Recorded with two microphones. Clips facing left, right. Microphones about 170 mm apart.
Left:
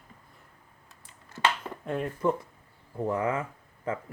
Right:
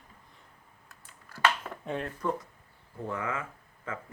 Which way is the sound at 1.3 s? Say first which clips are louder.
Even; 20° left (ahead or behind).